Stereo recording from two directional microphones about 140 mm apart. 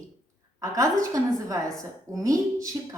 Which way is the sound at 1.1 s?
25° right (ahead or behind).